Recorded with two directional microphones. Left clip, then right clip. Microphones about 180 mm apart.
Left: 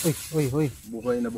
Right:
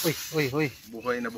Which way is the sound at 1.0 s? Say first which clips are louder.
Left 3 dB; 45° left (ahead or behind).